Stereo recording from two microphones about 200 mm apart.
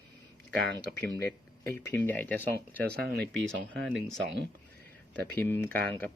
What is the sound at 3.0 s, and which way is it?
Speech, 50° right (ahead or behind).